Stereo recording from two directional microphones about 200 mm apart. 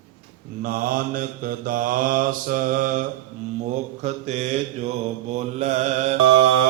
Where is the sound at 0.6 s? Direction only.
45° right (ahead or behind).